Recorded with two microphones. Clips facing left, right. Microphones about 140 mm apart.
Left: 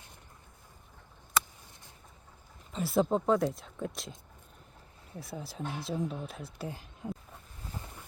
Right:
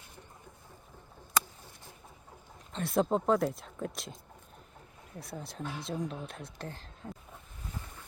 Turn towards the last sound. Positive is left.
turn(degrees=10)  # may be behind; listen again after turning